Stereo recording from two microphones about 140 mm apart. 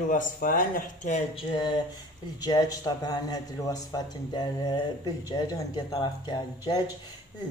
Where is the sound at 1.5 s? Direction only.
30° left (ahead or behind).